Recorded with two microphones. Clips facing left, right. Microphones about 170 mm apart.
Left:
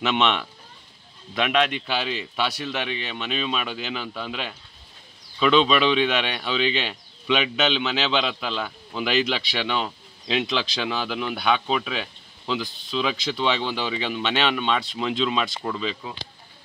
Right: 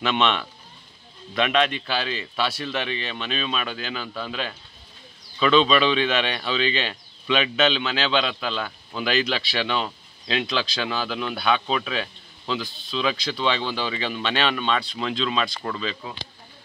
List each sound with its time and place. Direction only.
0.0 s speech: 15° left (ahead or behind)
10.3 s speech: 20° left (ahead or behind)